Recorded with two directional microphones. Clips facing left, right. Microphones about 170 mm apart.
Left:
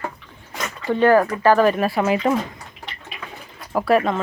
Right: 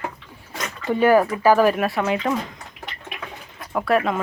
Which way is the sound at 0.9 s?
10° right (ahead or behind).